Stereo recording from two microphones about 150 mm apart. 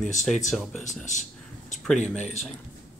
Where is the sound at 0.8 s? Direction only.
55° left (ahead or behind).